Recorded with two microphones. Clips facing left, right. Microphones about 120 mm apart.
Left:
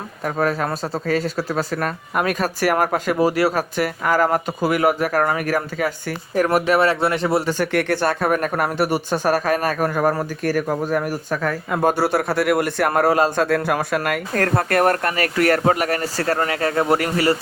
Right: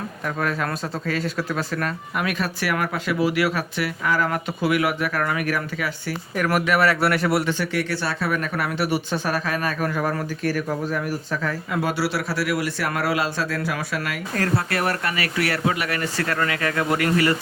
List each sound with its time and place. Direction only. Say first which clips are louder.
0.3 s speech: left 5 dB; 40° left (ahead or behind)
7.6 s a man's voice: left 6 dB; 55° left (ahead or behind); by 17.3 s 30° left (ahead or behind)